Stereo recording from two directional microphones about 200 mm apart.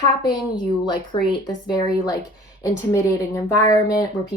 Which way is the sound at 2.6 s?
15° left (ahead or behind).